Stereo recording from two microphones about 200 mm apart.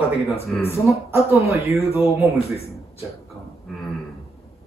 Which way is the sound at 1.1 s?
15° right (ahead or behind).